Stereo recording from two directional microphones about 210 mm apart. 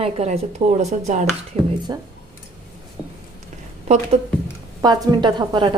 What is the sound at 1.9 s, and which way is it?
Speech, 20° right (ahead or behind).